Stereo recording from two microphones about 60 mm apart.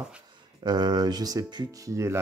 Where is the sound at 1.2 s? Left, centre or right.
Right.